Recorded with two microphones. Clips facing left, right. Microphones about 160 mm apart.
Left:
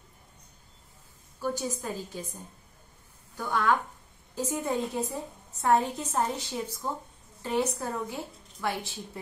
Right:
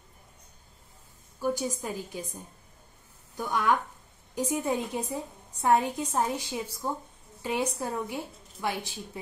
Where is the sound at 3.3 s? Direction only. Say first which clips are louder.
Even; 15° right (ahead or behind).